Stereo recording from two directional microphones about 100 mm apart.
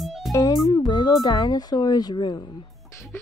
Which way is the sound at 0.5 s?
45° left (ahead or behind).